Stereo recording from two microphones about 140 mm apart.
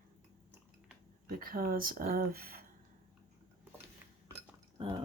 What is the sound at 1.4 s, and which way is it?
Speech, 90° right.